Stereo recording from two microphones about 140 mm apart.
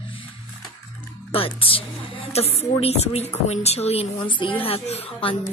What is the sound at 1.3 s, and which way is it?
A woman's voice, 40° left (ahead or behind).